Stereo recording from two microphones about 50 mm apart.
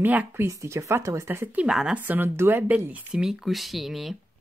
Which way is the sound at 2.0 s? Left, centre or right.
Right.